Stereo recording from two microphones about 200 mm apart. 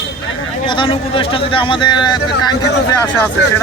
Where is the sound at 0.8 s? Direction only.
25° left (ahead or behind).